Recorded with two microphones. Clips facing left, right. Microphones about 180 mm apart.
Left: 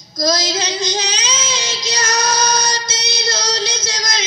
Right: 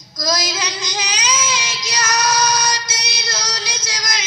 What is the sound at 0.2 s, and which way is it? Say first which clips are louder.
Child singing: left 4 dB; 25° left (ahead or behind).